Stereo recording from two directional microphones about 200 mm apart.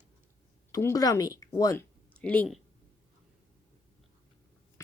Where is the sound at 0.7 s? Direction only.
15° left (ahead or behind).